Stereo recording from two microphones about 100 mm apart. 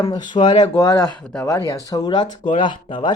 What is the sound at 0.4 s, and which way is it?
Speech, 90° left.